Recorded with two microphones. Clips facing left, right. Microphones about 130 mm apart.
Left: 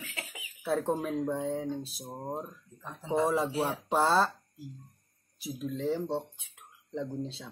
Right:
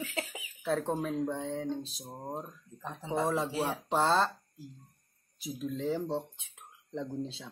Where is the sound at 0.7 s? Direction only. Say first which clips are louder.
Left 1 dB; 5° left (ahead or behind).